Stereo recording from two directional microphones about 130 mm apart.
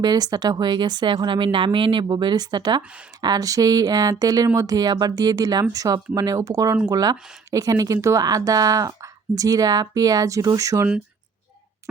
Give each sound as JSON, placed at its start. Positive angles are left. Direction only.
{"t": 0.0, "sound": "speech", "side_deg": -30}